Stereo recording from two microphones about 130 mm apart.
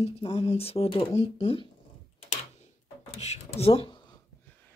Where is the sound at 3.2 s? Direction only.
55° left (ahead or behind).